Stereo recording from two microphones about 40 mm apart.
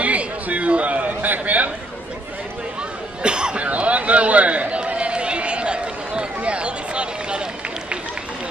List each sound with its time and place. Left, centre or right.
0.0 s chatter: right
3.2 s cough: right
3.6 s a sound: right
4.7 s run: right